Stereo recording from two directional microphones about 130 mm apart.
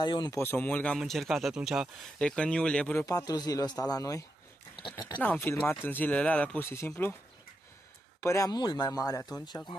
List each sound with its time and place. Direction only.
0.0 s speech: 35° left (ahead or behind)
0.4 s speech: 15° left (ahead or behind)
0.9 s speech: centre (ahead or behind)
3.1 s speech: 30° left (ahead or behind)
5.2 s speech: 15° left (ahead or behind)
8.2 s speech: 25° left (ahead or behind)